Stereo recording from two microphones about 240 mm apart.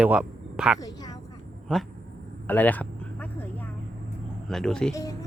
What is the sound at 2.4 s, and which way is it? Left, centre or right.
Speech, centre.